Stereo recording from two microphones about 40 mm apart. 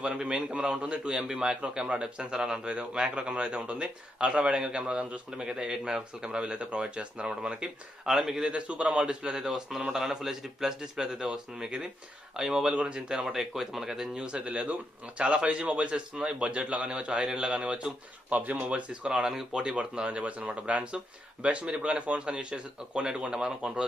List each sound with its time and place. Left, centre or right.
0.0 s a man's voice: right
1.1 s a man's voice: centre
8.0 s a man's voice: centre
8.5 s a man's voice: right
12.7 s a man's voice: right
13.2 s a man's voice: centre
14.1 s a man's voice: right
18.4 s speech: right
18.7 s a man's voice: right
19.7 s a man's voice: right